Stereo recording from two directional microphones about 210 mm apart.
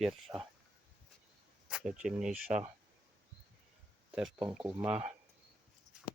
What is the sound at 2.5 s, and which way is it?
Speech, 30° right (ahead or behind).